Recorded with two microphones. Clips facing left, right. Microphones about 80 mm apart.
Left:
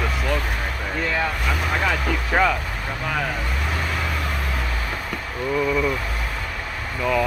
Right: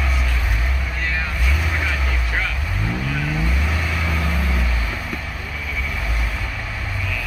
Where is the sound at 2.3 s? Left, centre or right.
Left.